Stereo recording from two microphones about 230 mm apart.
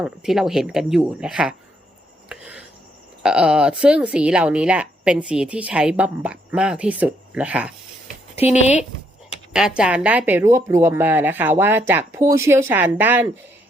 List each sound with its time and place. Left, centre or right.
0.0 s a woman's voice: centre
2.3 s a sound: centre
3.2 s a woman's voice: centre
8.4 s speech: left
9.5 s speech: centre